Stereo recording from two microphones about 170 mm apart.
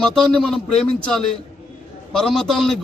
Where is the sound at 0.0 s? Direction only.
5° left (ahead or behind).